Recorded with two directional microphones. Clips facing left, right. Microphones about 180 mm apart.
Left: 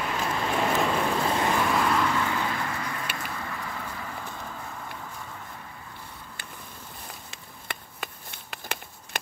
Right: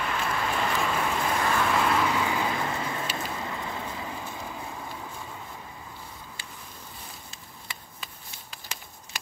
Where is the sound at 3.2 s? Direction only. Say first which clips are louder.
Right 2 dB; 20° right (ahead or behind).